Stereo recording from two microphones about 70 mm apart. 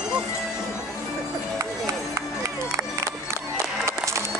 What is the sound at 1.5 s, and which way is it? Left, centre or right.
Music, right.